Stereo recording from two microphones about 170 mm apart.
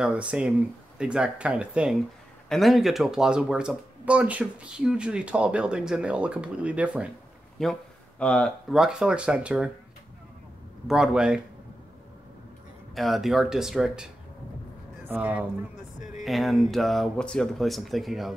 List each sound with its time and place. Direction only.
0.0 s speech: 5° right (ahead or behind)
10.9 s speech: 5° right (ahead or behind)
12.9 s speech: centre (ahead or behind)
16.0 s a sound: 45° left (ahead or behind)
16.3 s speech: centre (ahead or behind)